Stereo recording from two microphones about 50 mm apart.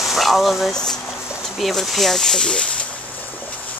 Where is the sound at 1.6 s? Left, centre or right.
Centre.